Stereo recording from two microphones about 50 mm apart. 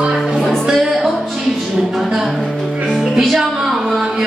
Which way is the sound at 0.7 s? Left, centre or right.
Centre.